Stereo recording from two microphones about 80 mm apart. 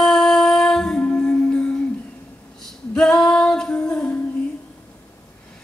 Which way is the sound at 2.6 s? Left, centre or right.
Centre.